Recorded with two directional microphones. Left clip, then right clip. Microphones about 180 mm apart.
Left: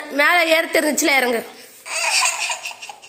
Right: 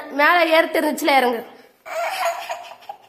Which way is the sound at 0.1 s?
10° left (ahead or behind).